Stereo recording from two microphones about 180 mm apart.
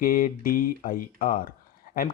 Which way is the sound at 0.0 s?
50° left (ahead or behind).